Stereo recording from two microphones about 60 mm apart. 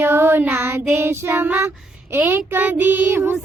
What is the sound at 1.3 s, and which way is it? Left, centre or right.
Child singing, right.